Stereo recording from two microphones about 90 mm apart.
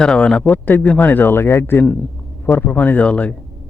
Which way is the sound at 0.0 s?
10° left (ahead or behind).